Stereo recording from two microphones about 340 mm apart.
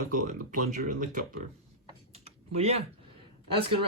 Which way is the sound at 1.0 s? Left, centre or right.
Right.